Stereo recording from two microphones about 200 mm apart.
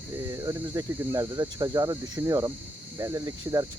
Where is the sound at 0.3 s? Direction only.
15° right (ahead or behind).